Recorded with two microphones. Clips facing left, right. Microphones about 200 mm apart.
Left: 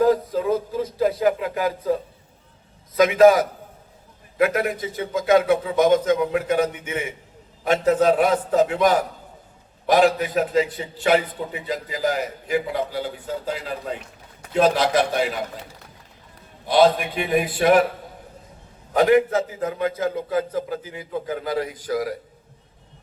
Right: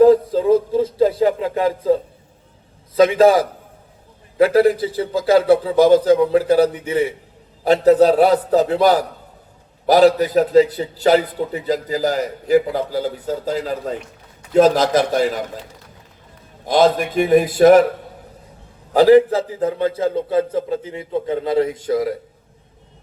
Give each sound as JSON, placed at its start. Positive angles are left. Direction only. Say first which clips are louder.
{"t": 0.0, "sound": "a sound", "louder": "right 7 dB", "side_deg": -30}
{"t": 2.9, "sound": "a man's voice", "louder": "right 2 dB", "side_deg": -30}
{"t": 16.6, "sound": "a man's voice", "louder": "right 2 dB", "side_deg": -45}
{"t": 18.9, "sound": "a man's voice", "louder": "right 6 dB", "side_deg": -30}